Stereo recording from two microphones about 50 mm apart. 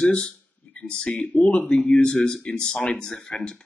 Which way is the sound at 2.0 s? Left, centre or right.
Left.